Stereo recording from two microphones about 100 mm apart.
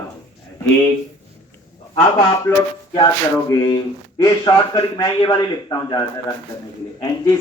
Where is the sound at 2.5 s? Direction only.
20° left (ahead or behind).